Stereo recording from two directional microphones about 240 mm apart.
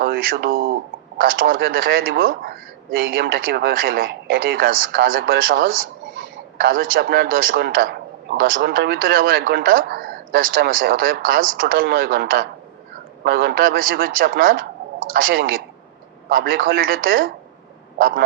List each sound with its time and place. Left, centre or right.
0.0 s a man's voice: right